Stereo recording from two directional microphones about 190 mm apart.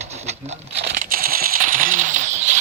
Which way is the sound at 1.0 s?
50° right (ahead or behind).